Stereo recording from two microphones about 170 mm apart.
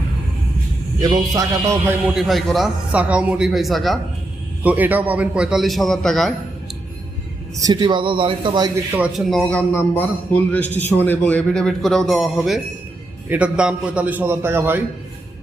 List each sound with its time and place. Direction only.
1.4 s a man's voice: 20° right (ahead or behind)
2.1 s speech: centre (ahead or behind)
7.5 s a man's voice: 25° right (ahead or behind)
8.9 s a man's voice: 5° right (ahead or behind)